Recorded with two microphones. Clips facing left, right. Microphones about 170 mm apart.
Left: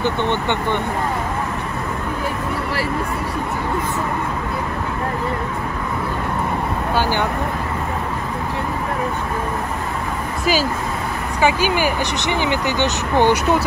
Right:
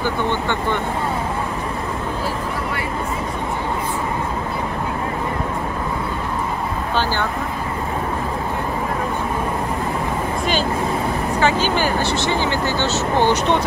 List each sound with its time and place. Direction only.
0.0 s speech: 20° left (ahead or behind)
10.4 s speech: 5° left (ahead or behind)